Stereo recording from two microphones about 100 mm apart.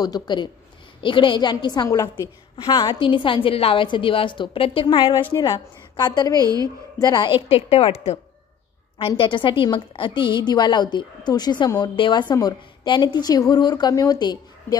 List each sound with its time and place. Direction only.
0.0 s a woman's voice: 45° left (ahead or behind)
1.0 s a woman's voice: 55° left (ahead or behind)
3.0 s a woman's voice: 60° left (ahead or behind)
6.3 s a woman's voice: 40° right (ahead or behind)
7.0 s a woman's voice: 45° left (ahead or behind)
7.4 s a woman's voice: 90° left
8.9 s a woman's voice: 60° left (ahead or behind); by 14.8 s 45° left (ahead or behind)